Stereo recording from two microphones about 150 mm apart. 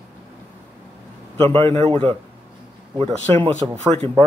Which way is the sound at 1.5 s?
15° left (ahead or behind).